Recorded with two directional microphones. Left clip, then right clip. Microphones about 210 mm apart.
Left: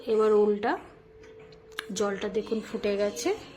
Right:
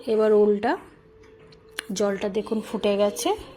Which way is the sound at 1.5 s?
25° right (ahead or behind).